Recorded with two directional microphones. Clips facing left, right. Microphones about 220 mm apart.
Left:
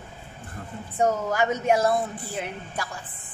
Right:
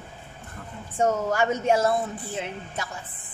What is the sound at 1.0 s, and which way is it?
A woman's voice, 30° right (ahead or behind).